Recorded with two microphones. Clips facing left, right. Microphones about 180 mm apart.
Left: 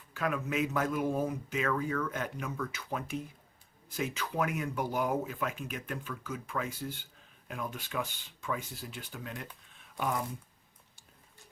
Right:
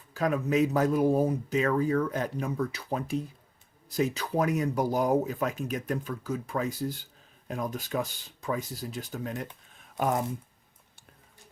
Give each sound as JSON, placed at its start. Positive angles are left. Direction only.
{"t": 0.1, "sound": "speech", "side_deg": -35}